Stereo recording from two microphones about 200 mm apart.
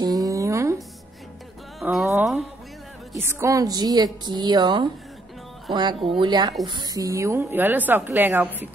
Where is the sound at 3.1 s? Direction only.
15° right (ahead or behind).